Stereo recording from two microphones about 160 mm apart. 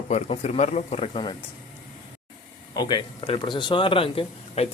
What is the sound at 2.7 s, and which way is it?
Speech, 25° left (ahead or behind).